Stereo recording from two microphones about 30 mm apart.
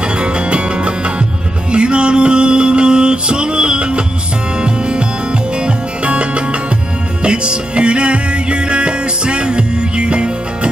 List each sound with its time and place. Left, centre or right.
0.0 s music: right